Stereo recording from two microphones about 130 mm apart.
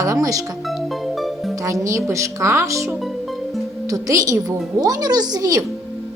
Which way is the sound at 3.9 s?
25° right (ahead or behind).